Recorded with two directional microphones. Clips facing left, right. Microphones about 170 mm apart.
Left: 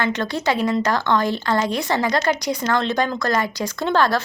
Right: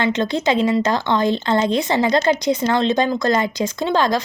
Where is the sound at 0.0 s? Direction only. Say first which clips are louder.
Right 3 dB; 20° right (ahead or behind).